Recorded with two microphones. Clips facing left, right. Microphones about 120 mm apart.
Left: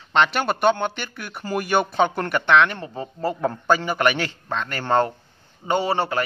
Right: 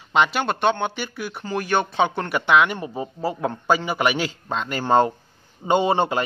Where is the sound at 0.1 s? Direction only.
5° right (ahead or behind).